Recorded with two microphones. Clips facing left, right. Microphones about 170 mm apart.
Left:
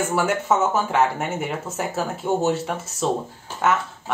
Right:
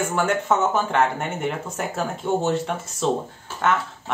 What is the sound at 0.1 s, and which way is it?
Speech, 5° left (ahead or behind).